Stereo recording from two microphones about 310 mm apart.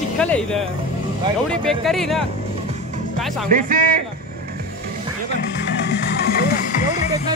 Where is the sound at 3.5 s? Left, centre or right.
Right.